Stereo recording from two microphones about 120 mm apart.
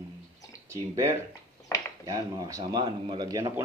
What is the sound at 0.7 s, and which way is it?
Speech, 25° right (ahead or behind).